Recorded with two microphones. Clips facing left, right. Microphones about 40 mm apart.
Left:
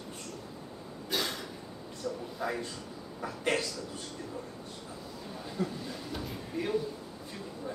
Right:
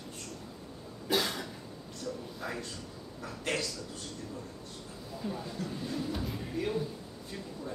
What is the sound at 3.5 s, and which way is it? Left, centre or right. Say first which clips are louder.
Speech: right 1 dB; left.